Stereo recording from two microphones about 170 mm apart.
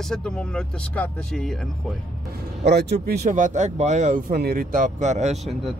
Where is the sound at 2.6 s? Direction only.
80° right; by 4.2 s 45° right (ahead or behind).